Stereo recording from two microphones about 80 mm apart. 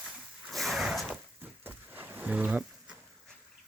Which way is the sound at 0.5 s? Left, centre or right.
Centre.